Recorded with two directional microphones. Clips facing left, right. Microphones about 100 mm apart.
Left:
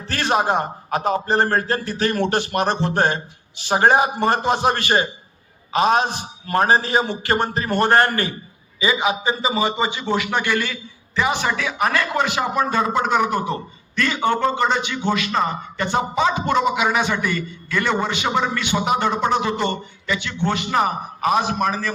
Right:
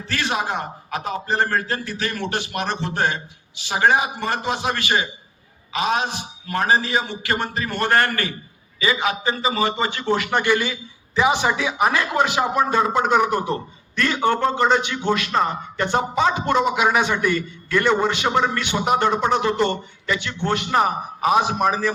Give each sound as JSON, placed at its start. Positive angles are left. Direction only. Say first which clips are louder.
{"t": 0.1, "sound": "a man's voice", "louder": "left 5 dB", "side_deg": 40}